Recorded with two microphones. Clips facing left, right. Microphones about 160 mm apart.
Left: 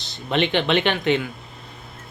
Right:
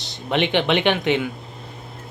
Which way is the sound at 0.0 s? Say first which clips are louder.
Even; 15° right (ahead or behind).